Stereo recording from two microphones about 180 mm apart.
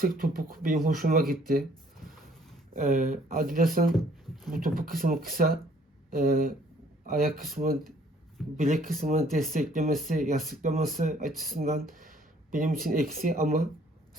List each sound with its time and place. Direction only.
0.0 s speech: 55° right (ahead or behind)
2.7 s speech: 45° right (ahead or behind)
8.5 s speech: 40° right (ahead or behind)